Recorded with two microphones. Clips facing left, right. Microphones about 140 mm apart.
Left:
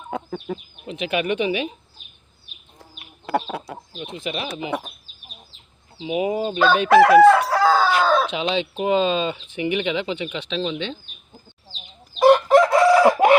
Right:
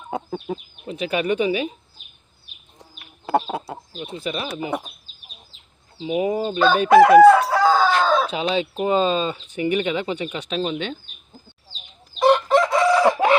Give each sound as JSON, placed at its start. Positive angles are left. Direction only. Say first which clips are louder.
{"t": 0.1, "sound": "speech", "louder": "right 1 dB", "side_deg": -30}
{"t": 3.6, "sound": "speech", "louder": "right 2 dB", "side_deg": -20}
{"t": 4.2, "sound": "speech", "louder": "right 1 dB", "side_deg": -40}
{"t": 6.0, "sound": "speech", "louder": "right 1 dB", "side_deg": -40}
{"t": 6.8, "sound": "chicken", "louder": "right 2 dB", "side_deg": 0}
{"t": 8.3, "sound": "speech", "louder": "right 1 dB", "side_deg": -40}
{"t": 12.2, "sound": "chicken", "louder": "left 3 dB", "side_deg": 5}